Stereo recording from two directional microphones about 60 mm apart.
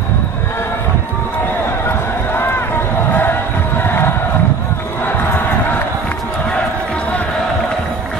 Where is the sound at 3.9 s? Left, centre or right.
Left.